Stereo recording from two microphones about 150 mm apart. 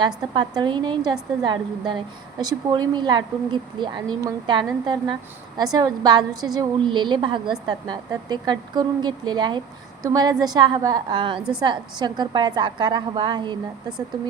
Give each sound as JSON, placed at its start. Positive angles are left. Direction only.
{"t": 0.3, "sound": "a woman's voice", "side_deg": -30}
{"t": 11.3, "sound": "a woman's voice", "side_deg": -5}
{"t": 11.6, "sound": "speech", "side_deg": -30}